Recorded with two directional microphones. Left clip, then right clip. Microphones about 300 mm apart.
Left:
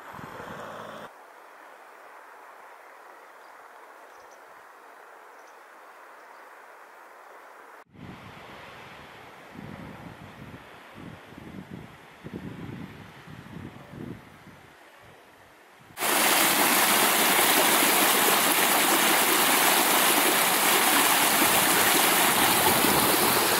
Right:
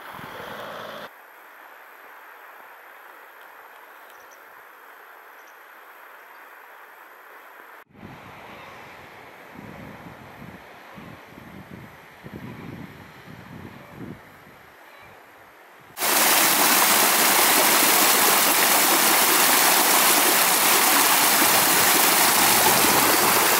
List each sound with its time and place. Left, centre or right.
0.0 s vehicle: centre
16.0 s stream: centre